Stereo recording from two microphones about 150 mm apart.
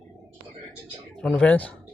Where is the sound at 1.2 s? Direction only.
5° left (ahead or behind).